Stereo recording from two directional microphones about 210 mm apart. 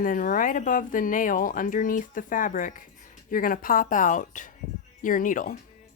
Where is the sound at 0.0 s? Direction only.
40° left (ahead or behind).